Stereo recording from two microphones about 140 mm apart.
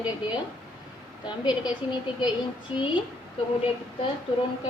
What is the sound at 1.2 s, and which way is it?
Speech, 30° left (ahead or behind).